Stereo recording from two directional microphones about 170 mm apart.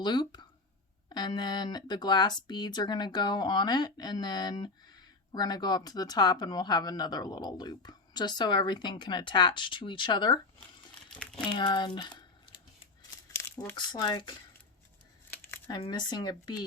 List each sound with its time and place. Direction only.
0.0 s speech: 25° left (ahead or behind)
11.2 s speech: 5° left (ahead or behind)
11.4 s speech: 25° left (ahead or behind)
11.9 s a sound: 25° left (ahead or behind)
13.3 s crumpling: 10° left (ahead or behind)
13.7 s speech: 25° left (ahead or behind)
15.3 s crumpling: 15° left (ahead or behind)
15.8 s speech: 25° left (ahead or behind)